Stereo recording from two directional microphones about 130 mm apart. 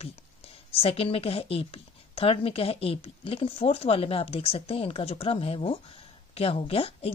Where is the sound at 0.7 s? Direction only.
45° left (ahead or behind).